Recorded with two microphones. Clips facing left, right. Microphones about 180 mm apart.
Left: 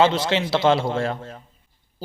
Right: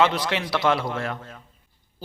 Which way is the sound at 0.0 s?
25° left (ahead or behind).